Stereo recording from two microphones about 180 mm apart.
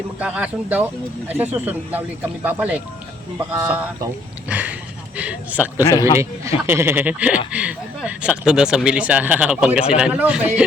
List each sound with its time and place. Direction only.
0.2 s speech: 5° right (ahead or behind)
5.8 s a man's voice: 20° left (ahead or behind)
6.7 s speech: 15° right (ahead or behind)